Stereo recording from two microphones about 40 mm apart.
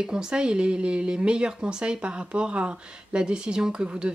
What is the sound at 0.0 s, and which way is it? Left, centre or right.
Speech, centre.